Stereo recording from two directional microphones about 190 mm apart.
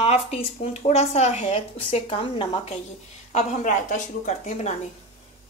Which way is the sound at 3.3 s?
45° left (ahead or behind).